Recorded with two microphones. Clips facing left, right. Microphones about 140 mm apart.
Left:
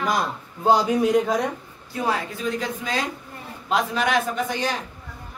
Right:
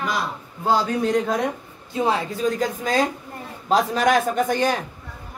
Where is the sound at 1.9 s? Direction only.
25° right (ahead or behind).